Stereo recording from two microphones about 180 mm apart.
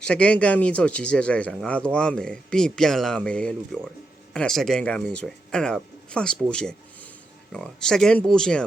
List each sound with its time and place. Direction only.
0.0 s speech: 5° left (ahead or behind)